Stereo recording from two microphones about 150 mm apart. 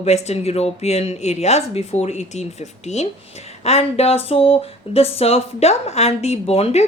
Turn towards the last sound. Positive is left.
turn(degrees=40)  # may be behind; listen again after turning